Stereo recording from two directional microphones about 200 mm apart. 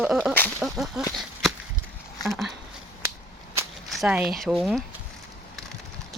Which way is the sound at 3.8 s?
Centre (ahead or behind).